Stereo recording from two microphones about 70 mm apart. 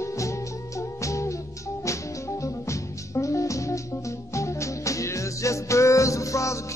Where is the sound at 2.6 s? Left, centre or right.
Left.